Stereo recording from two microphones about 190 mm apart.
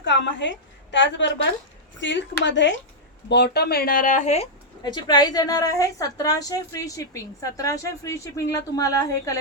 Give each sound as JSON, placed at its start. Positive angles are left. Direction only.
{"t": 0.0, "sound": "a woman's voice", "side_deg": 70}
{"t": 4.8, "sound": "a woman's voice", "side_deg": 20}